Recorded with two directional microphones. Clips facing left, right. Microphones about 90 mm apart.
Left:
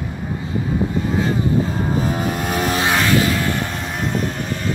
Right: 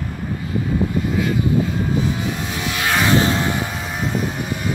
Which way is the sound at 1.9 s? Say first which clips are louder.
Left 1 dB; 45° left (ahead or behind).